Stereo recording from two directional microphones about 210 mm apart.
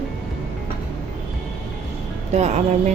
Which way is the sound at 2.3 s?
35° right (ahead or behind).